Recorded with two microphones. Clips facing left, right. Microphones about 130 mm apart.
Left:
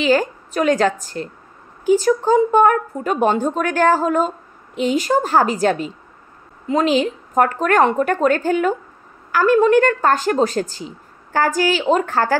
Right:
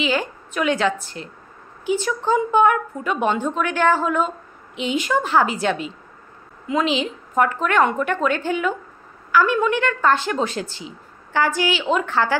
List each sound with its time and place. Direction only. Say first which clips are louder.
0.0 s a woman's voice: left 6 dB; 40° left (ahead or behind)